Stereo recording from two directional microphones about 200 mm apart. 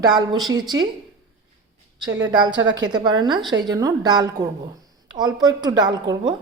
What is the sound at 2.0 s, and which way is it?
A woman's voice, 20° right (ahead or behind).